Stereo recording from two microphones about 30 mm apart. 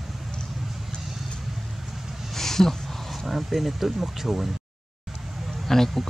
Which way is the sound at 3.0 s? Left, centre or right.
Centre.